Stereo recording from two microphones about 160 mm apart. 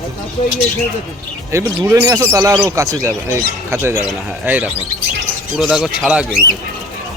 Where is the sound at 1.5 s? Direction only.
15° right (ahead or behind).